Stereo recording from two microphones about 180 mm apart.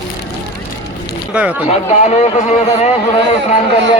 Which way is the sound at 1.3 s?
5° right (ahead or behind).